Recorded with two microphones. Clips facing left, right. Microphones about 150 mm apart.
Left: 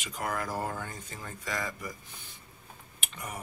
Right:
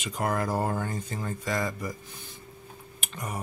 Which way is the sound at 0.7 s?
45° right (ahead or behind).